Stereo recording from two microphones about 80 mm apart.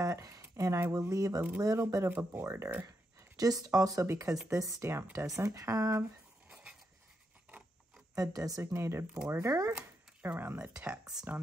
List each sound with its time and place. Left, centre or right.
0.0 s speech: right
1.1 s speech: right
2.0 s speech: right
6.5 s dog: centre
8.1 s speech: right
8.7 s speech: right
10.4 s speech: right
10.9 s speech: centre